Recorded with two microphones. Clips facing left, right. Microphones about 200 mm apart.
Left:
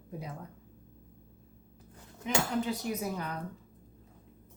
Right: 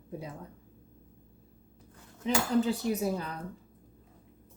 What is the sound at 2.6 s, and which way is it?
Dishes, 30° right (ahead or behind).